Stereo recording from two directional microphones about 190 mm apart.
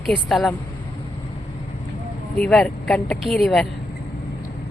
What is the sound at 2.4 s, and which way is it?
A woman's voice, 5° left (ahead or behind).